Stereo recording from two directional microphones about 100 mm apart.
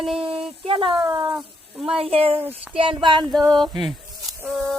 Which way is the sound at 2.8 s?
55° right (ahead or behind).